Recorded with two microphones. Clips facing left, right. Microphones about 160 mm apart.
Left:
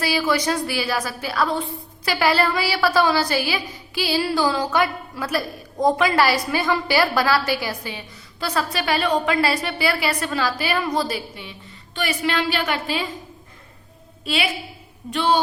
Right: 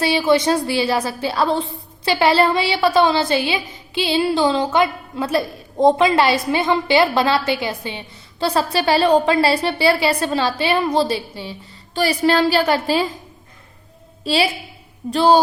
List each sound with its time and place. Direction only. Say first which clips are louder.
0.0 s a woman's voice: right 5 dB; 25° right (ahead or behind)
14.3 s a woman's voice: right 5 dB; 30° right (ahead or behind)